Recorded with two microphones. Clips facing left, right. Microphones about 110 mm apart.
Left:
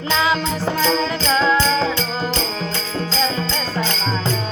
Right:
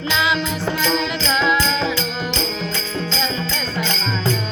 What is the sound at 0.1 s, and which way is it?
Music, 40° left (ahead or behind).